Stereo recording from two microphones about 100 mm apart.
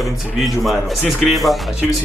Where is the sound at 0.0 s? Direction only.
Centre (ahead or behind).